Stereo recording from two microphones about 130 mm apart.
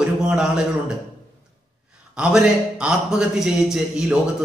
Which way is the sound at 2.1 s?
5° right (ahead or behind).